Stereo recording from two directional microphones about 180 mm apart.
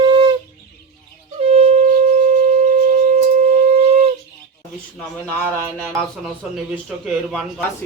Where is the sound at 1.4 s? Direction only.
35° right (ahead or behind).